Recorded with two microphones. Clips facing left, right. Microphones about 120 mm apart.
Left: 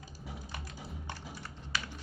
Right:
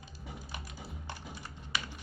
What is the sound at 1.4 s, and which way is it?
Typing, 15° right (ahead or behind).